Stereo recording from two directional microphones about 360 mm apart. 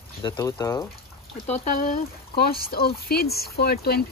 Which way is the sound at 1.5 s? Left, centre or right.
Left.